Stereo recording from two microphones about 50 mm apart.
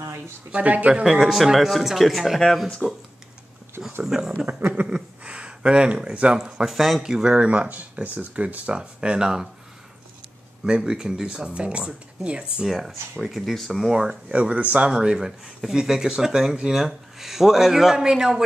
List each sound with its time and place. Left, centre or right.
0.5 s speech: right
1.2 s speech: centre
2.8 s speech: centre
4.0 s speech: centre
4.5 s a sound: right
4.8 s speech: right
7.3 s speech: right
8.7 s speech: centre
10.6 s speech: centre
12.6 s speech: centre
13.8 s speech: centre
14.3 s speech: right
14.9 s speech: centre